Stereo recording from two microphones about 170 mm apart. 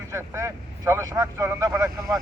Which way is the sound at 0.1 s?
15° right (ahead or behind).